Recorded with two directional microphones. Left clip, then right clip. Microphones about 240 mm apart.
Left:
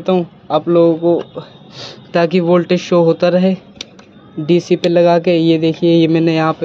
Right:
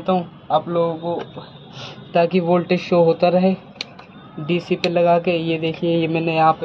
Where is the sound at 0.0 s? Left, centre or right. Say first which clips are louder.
Left 5 dB; left.